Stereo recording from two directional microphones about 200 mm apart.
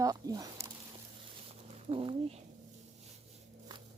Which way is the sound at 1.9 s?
25° right (ahead or behind).